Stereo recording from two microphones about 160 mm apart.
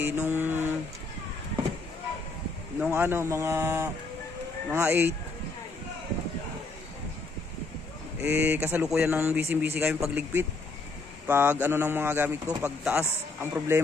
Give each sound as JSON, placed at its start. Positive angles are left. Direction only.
{"t": 0.0, "sound": "a man's voice", "side_deg": -15}
{"t": 2.9, "sound": "a man's voice", "side_deg": -15}
{"t": 8.2, "sound": "a man's voice", "side_deg": -15}